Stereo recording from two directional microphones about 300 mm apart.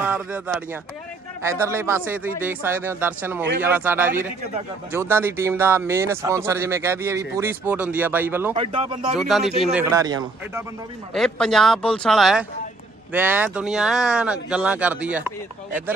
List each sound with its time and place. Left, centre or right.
0.0 s speech: centre
8.5 s speech: centre
9.1 s speech: centre
11.1 s speech: centre